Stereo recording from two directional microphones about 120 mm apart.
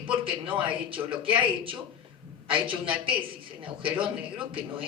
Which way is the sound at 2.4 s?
45° right (ahead or behind).